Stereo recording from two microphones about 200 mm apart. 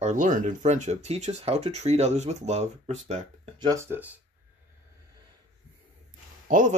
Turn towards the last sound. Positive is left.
turn(degrees=-40)  # may be behind; listen again after turning